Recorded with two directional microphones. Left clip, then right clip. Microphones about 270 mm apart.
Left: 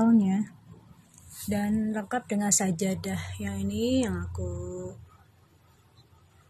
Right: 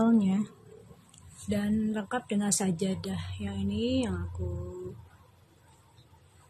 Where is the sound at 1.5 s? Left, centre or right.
Centre; by 4.1 s left.